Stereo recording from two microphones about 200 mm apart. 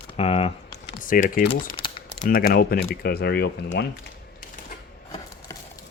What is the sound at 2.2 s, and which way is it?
Speech, 45° left (ahead or behind).